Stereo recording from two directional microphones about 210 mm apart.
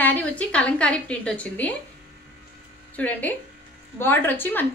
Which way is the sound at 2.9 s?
5° left (ahead or behind).